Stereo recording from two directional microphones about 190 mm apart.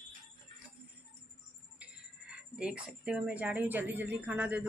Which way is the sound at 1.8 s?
5° right (ahead or behind).